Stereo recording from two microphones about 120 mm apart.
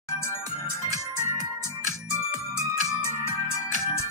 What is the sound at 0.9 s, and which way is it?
Music, 25° left (ahead or behind).